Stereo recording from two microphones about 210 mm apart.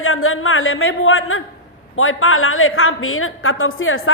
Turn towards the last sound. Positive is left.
turn(degrees=75)  # may be behind; listen again after turning